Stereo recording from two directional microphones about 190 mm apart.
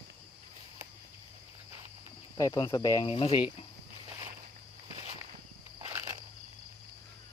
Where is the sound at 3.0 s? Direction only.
30° left (ahead or behind).